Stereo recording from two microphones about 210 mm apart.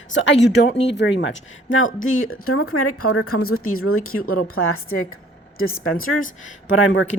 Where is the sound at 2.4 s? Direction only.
90° left.